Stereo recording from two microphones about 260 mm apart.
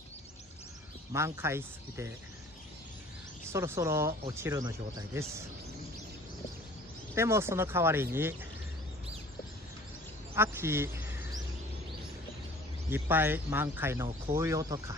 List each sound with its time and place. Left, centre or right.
1.1 s speech: centre
3.4 s speech: centre
7.2 s speech: centre
10.3 s a sound: centre
12.9 s speech: centre